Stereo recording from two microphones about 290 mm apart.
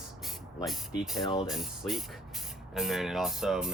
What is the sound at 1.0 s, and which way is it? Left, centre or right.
Speech, centre.